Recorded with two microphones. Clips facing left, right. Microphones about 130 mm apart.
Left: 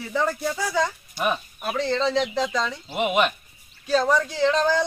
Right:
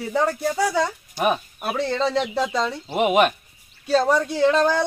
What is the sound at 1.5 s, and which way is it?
Speech, 15° right (ahead or behind).